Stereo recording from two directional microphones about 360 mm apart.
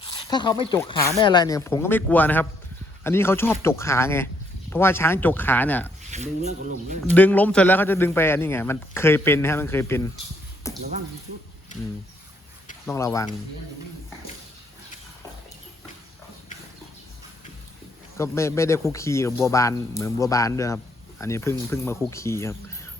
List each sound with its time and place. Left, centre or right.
0.3 s speech: centre
6.0 s speech: centre
7.1 s speech: centre
10.6 s a sound: centre
12.8 s speech: centre
18.2 s speech: centre